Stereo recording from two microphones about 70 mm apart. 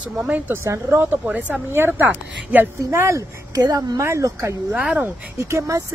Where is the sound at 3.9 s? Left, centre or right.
Right.